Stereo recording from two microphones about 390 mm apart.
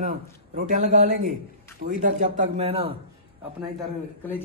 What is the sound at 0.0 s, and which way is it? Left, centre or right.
A man's voice, centre.